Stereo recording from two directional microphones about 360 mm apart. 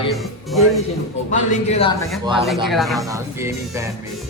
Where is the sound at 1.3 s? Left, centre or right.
Centre.